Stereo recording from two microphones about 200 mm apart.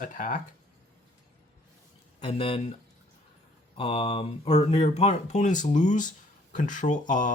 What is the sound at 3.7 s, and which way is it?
Speech, 25° left (ahead or behind).